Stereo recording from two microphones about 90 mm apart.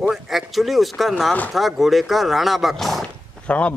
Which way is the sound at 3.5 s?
15° left (ahead or behind).